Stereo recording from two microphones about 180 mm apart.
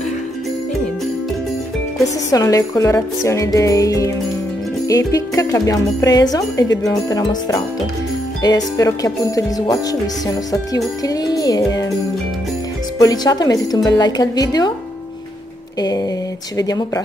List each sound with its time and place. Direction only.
2.3 s music: 20° left (ahead or behind)
13.0 s music: 20° left (ahead or behind)
16.5 s music: 20° left (ahead or behind)